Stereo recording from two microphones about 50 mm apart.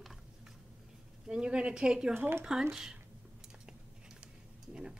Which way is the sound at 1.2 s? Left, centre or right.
Centre.